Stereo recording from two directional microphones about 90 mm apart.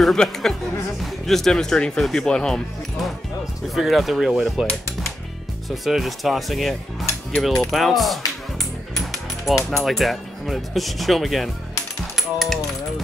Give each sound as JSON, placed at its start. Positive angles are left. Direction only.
{"t": 0.0, "sound": "speech", "side_deg": 5}
{"t": 5.9, "sound": "speech", "side_deg": 0}
{"t": 8.9, "sound": "mechanisms", "side_deg": 0}
{"t": 9.7, "sound": "speech", "side_deg": 0}